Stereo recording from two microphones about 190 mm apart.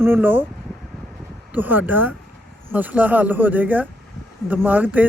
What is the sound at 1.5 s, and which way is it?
Speech, 10° right (ahead or behind).